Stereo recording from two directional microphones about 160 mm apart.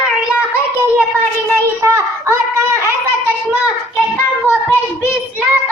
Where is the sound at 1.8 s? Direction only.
15° right (ahead or behind).